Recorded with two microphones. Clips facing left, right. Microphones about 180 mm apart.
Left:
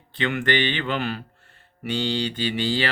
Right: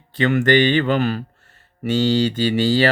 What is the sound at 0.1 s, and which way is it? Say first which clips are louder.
Speech: right 8 dB; 40° right (ahead or behind).